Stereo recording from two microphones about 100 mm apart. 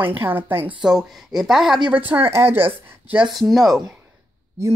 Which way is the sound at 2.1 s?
25° right (ahead or behind).